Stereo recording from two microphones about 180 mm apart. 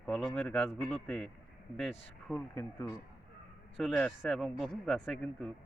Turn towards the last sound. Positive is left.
turn(degrees=0)  # may be behind; listen again after turning